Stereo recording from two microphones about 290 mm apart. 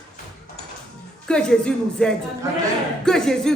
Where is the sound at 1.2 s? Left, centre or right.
Centre.